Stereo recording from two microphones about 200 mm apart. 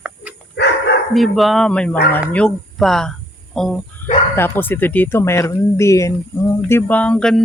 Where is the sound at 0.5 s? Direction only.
55° left (ahead or behind).